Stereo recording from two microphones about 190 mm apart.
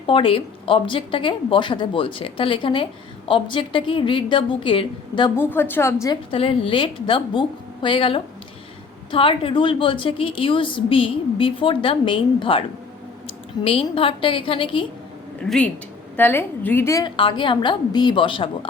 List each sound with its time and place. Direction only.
0.1 s a woman's voice: 30° left (ahead or behind)
5.4 s a woman's voice: 10° left (ahead or behind)
6.3 s a woman's voice: 30° left (ahead or behind)
15.4 s a woman's voice: 5° left (ahead or behind); by 18.7 s 25° left (ahead or behind)